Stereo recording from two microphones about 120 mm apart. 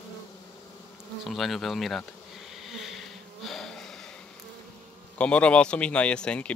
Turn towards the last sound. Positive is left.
turn(degrees=10)  # may be behind; listen again after turning